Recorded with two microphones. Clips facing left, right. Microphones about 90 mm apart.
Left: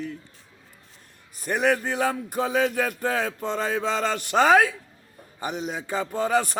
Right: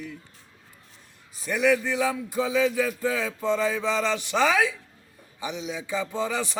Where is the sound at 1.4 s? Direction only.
50° left (ahead or behind).